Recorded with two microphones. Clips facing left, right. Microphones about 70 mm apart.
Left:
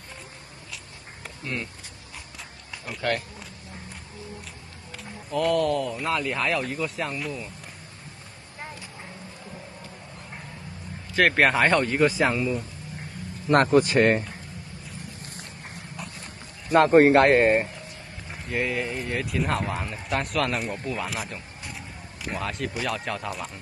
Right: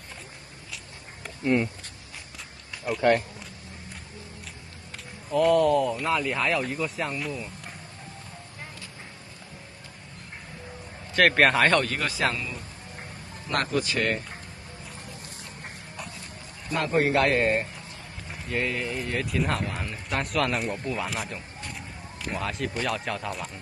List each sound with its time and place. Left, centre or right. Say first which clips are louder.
1.4 s speech: right 9 dB; right
2.9 s speech: right 8 dB; centre
5.3 s speech: right 3 dB; centre
11.1 s speech: even; centre
13.7 s speech: left 8 dB; left
16.7 s speech: left 8 dB; left
18.3 s speech: left 1 dB; centre